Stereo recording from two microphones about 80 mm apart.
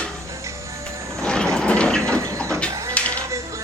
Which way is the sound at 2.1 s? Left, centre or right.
Right.